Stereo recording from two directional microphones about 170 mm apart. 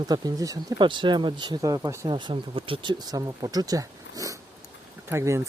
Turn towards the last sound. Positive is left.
turn(degrees=-15)  # may be behind; listen again after turning